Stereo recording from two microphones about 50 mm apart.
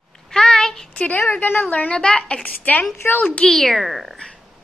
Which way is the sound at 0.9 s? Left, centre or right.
Left.